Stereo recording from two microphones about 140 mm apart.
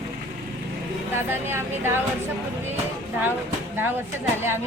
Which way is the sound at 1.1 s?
15° right (ahead or behind).